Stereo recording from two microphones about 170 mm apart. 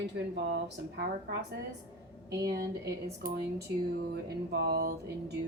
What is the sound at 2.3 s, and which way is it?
Speech, 20° right (ahead or behind).